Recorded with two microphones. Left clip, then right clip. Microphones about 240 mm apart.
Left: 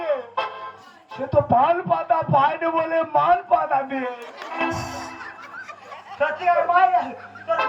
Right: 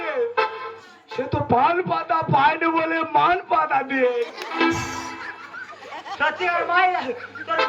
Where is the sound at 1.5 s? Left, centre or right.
Centre.